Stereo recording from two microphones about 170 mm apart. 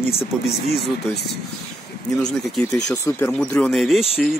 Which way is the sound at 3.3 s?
5° left (ahead or behind).